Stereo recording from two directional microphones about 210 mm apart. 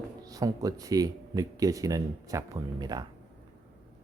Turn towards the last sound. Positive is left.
turn(degrees=-20)  # may be behind; listen again after turning